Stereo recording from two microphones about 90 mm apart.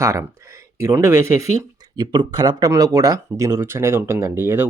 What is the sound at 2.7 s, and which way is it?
Speech, 40° right (ahead or behind).